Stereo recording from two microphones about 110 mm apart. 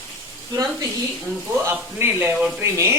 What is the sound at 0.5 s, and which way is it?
Speech, 35° right (ahead or behind).